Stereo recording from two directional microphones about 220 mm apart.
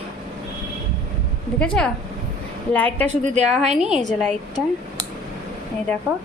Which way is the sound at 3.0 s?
30° right (ahead or behind).